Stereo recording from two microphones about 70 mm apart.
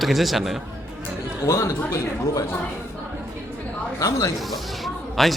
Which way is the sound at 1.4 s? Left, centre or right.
Left.